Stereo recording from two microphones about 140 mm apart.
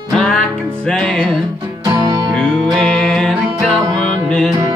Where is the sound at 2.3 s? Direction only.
5° left (ahead or behind).